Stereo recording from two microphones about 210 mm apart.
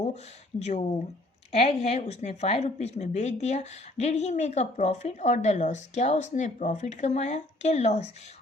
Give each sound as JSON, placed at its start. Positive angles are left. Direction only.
{"t": 0.6, "sound": "a woman's voice", "side_deg": 30}